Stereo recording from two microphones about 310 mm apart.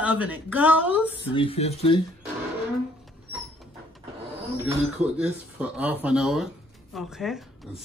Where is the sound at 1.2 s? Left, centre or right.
Centre.